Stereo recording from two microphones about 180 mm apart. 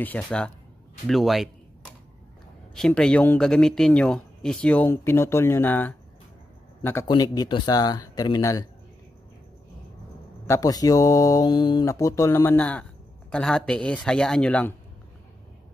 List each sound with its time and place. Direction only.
0.0 s a man's voice: 5° left (ahead or behind)
2.7 s a man's voice: 5° left (ahead or behind)
7.1 s speech: 25° left (ahead or behind)
10.4 s speech: 20° left (ahead or behind)